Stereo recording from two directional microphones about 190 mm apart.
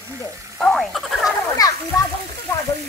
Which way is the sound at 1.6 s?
20° left (ahead or behind).